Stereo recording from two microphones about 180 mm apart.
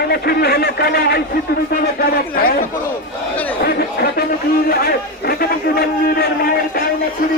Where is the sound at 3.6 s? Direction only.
65° left (ahead or behind).